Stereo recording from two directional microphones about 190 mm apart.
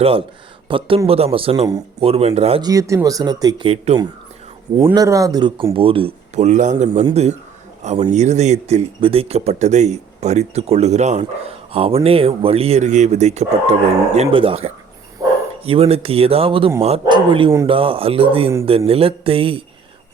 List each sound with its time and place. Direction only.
0.0 s speech: 30° right (ahead or behind)
2.6 s speech: 15° right (ahead or behind)
15.2 s bow-wow: 20° right (ahead or behind)
15.6 s speech: 30° right (ahead or behind)